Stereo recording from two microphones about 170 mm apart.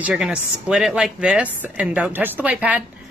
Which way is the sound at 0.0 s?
5° right (ahead or behind).